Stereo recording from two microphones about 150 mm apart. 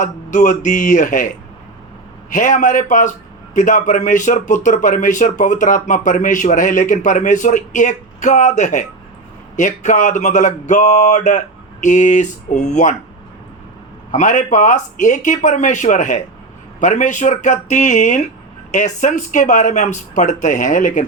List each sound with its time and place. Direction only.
0.0 s speech: 55° left (ahead or behind)
2.3 s speech: 60° left (ahead or behind)
14.1 s speech: 55° left (ahead or behind)